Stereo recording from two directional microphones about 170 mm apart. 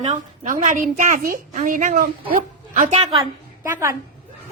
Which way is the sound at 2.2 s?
35° right (ahead or behind).